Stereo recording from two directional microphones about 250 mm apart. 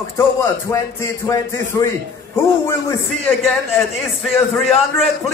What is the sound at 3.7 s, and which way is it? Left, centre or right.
A man's voice, centre.